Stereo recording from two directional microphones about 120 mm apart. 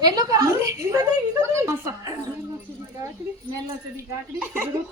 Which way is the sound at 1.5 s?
20° right (ahead or behind).